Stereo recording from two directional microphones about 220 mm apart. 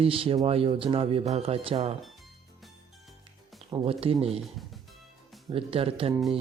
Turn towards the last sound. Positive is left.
turn(degrees=-25)  # may be behind; listen again after turning